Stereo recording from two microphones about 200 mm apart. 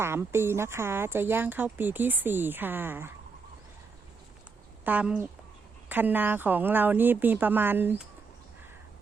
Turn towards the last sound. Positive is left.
turn(degrees=-10)  # may be behind; listen again after turning